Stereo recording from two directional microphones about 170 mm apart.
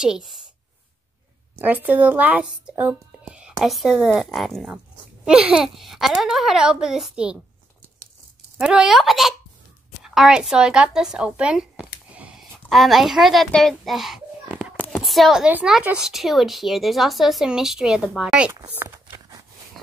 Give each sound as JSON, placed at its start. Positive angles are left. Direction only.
{"t": 0.0, "sound": "speech", "side_deg": 0}
{"t": 1.6, "sound": "speech", "side_deg": -10}
{"t": 8.5, "sound": "speech", "side_deg": -5}
{"t": 12.1, "sound": "a sound", "side_deg": -5}
{"t": 14.9, "sound": "speech", "side_deg": 0}
{"t": 19.0, "sound": "walk", "side_deg": -20}